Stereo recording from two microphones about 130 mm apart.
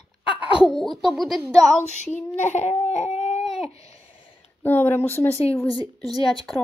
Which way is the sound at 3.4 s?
Centre (ahead or behind).